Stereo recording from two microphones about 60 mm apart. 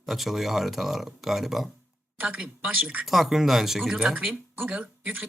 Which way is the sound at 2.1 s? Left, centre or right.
Right.